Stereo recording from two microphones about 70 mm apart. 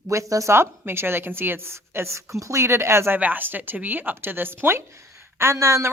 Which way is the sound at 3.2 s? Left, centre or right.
Right.